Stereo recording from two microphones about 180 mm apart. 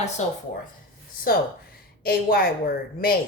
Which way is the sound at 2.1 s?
55° left (ahead or behind).